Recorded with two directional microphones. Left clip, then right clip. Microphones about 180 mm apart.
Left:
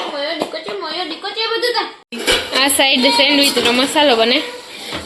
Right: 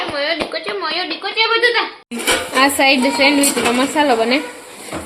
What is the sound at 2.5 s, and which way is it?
Speech, centre (ahead or behind).